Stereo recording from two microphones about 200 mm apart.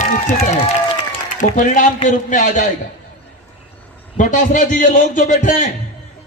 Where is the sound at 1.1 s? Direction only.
40° left (ahead or behind).